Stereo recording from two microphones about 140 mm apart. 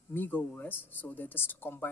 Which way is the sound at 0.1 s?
15° left (ahead or behind).